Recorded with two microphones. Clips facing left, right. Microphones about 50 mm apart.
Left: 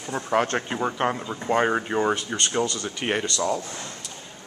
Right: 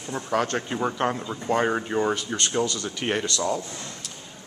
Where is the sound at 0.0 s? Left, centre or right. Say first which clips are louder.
Left 2 dB; left.